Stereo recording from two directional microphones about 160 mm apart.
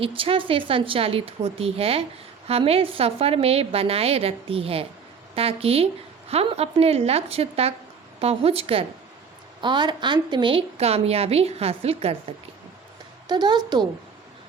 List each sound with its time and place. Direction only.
0.0 s a woman's voice: 35° right (ahead or behind)
13.2 s a woman's voice: 25° right (ahead or behind)